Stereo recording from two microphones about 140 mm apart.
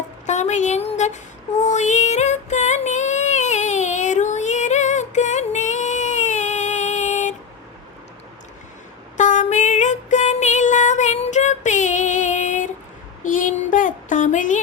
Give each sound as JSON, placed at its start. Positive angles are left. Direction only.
{"t": 0.3, "sound": "child singing", "side_deg": 55}
{"t": 9.1, "sound": "music", "side_deg": 60}
{"t": 13.2, "sound": "child singing", "side_deg": 70}